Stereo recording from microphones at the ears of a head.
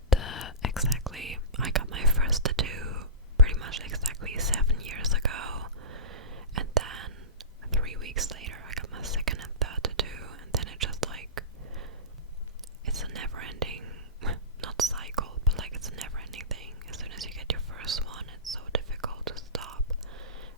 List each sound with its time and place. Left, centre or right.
0.1 s whispering: left
1.6 s whispering: right